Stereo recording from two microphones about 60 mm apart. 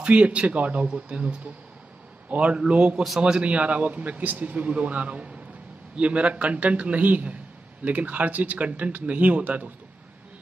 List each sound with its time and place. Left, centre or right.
0.0 s a man's voice: right